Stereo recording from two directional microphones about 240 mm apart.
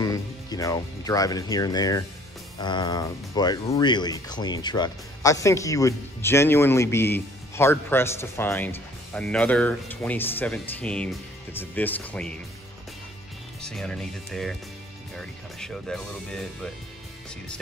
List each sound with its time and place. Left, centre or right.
0.0 s speech: centre
13.6 s speech: centre